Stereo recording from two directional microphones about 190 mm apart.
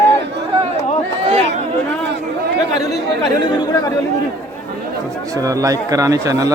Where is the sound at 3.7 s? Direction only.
20° left (ahead or behind).